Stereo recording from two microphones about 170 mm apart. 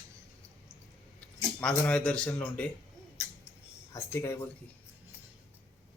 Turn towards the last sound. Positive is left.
turn(degrees=15)  # may be behind; listen again after turning